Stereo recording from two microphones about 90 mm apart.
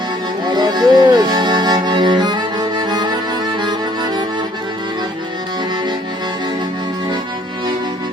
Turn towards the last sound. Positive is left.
turn(degrees=-55)  # may be behind; listen again after turning